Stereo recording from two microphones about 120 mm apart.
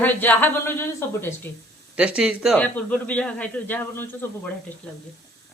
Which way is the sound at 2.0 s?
10° right (ahead or behind).